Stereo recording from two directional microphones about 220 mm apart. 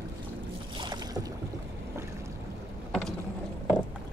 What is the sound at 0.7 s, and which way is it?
Boat, 20° right (ahead or behind).